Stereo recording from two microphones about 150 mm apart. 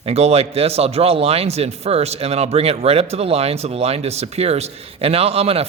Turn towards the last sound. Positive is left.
turn(degrees=-40)  # may be behind; listen again after turning